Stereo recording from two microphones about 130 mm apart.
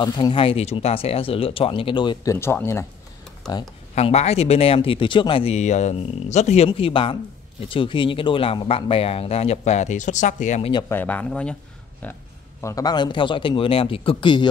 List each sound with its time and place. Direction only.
0.0 s speech: 35° left (ahead or behind)
2.2 s speech: 20° left (ahead or behind)
3.9 s speech: 55° left (ahead or behind)
10.6 s speech: 35° left (ahead or behind)
10.9 s speech: 15° left (ahead or behind)
12.6 s speech: 30° left (ahead or behind)